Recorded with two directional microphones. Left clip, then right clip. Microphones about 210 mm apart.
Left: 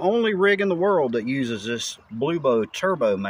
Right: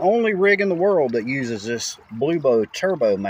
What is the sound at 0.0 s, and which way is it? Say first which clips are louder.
Speech: right 2 dB; 5° right (ahead or behind).